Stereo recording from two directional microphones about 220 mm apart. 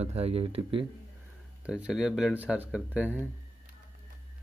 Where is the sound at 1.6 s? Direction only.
5° right (ahead or behind).